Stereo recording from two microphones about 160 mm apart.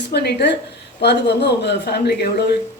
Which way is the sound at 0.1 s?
90° left.